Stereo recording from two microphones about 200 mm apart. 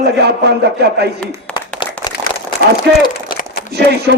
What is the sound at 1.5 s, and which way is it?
Applause, 20° left (ahead or behind).